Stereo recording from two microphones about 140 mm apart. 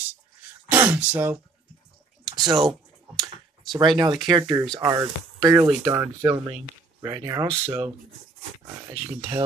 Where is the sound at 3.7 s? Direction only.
30° right (ahead or behind).